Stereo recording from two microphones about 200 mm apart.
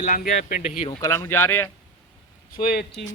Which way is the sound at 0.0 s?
40° left (ahead or behind).